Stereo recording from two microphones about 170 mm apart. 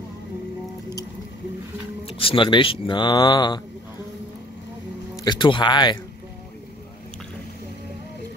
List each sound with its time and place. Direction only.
2.0 s speech: 30° left (ahead or behind)
5.1 s speech: 25° left (ahead or behind)